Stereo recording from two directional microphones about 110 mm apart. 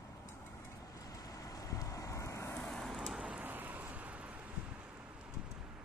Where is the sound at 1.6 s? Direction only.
30° left (ahead or behind).